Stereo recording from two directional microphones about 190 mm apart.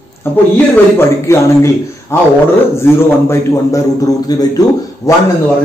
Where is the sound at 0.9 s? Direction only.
15° left (ahead or behind).